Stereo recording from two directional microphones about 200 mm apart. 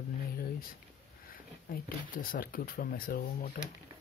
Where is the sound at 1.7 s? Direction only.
45° left (ahead or behind).